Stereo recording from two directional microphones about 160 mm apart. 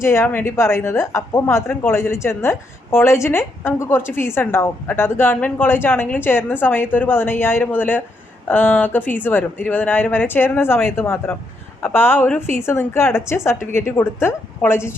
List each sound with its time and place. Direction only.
0.0 s a woman's voice: 15° left (ahead or behind)